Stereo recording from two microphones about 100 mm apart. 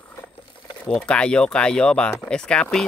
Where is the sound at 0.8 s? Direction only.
10° left (ahead or behind).